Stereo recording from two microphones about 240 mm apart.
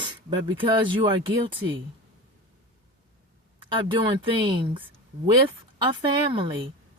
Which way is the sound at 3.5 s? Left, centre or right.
Right.